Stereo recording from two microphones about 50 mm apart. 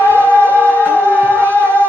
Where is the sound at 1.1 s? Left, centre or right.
Right.